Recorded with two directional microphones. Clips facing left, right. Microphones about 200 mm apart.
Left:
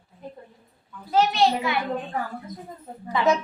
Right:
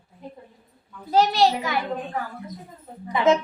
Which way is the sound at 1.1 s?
35° right (ahead or behind).